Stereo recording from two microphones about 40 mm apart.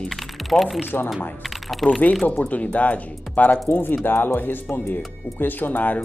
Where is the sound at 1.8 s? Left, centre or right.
Centre.